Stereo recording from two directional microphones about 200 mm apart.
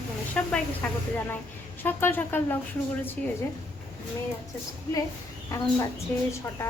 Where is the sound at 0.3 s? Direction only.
5° left (ahead or behind).